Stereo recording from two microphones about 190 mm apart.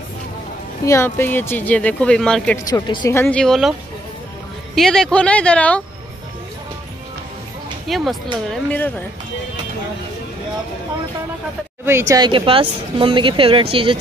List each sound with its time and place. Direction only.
0.8 s speech: 15° left (ahead or behind)
2.6 s speech: 20° left (ahead or behind); by 3.7 s centre (ahead or behind)
4.7 s speech: 5° left (ahead or behind)
7.9 s speech: centre (ahead or behind)
11.8 s speech: 15° right (ahead or behind)